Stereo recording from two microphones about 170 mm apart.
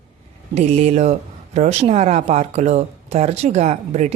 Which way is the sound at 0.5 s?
40° right (ahead or behind).